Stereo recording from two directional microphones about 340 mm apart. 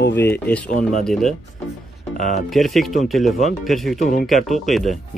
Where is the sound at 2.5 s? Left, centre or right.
Centre.